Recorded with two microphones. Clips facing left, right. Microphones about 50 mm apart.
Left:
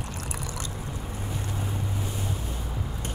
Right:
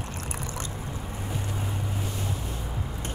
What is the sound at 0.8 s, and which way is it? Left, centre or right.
Boat, centre.